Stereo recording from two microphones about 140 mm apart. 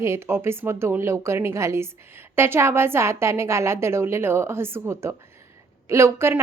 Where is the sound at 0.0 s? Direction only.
20° right (ahead or behind).